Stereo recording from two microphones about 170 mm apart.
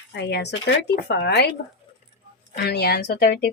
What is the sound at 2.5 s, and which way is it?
Speech, 75° left (ahead or behind).